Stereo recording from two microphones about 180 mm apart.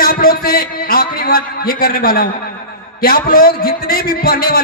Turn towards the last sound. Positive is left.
turn(degrees=55)  # may be behind; listen again after turning